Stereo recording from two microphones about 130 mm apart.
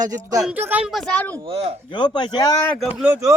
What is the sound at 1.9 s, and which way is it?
Speech, 35° left (ahead or behind).